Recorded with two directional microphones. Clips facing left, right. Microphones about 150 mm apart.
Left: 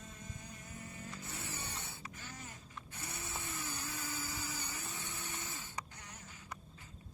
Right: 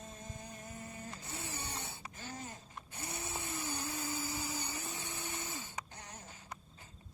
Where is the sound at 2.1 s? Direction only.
30° right (ahead or behind).